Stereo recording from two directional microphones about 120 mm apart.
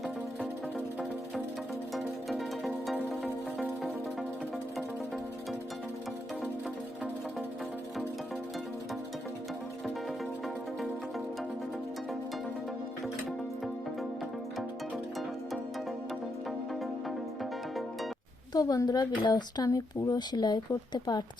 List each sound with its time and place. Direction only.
2.6 s music: centre (ahead or behind)
18.5 s speech: 30° left (ahead or behind)